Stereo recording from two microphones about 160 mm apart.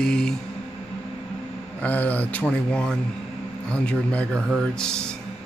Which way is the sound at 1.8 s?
10° left (ahead or behind).